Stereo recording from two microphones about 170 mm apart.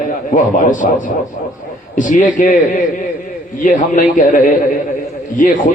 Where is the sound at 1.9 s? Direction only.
50° left (ahead or behind).